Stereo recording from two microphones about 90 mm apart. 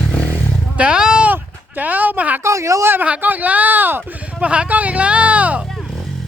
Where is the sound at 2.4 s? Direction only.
35° right (ahead or behind).